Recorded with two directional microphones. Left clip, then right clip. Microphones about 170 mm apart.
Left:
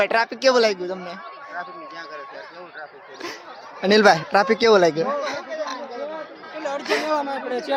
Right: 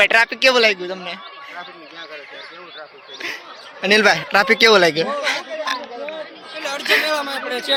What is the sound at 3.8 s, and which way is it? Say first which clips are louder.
Speech: right 1 dB; 25° left (ahead or behind).